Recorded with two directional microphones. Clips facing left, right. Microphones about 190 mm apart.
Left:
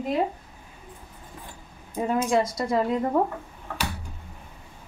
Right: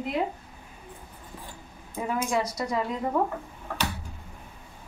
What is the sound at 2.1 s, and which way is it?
Speech, 30° left (ahead or behind).